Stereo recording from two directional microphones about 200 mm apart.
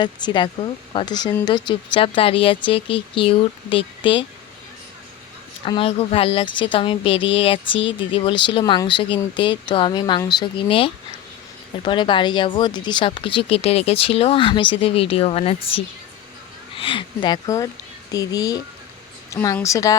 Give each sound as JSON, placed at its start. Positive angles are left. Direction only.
{"t": 0.0, "sound": "speech", "side_deg": 20}
{"t": 5.6, "sound": "a woman's voice", "side_deg": 25}